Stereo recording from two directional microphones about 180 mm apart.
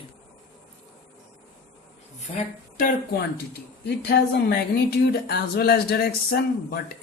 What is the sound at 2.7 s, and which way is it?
Speech, 55° left (ahead or behind).